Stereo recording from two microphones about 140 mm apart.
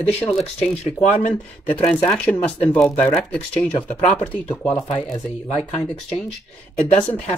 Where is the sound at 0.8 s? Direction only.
55° left (ahead or behind).